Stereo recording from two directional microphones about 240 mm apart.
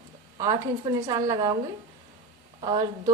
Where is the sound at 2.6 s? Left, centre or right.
Centre.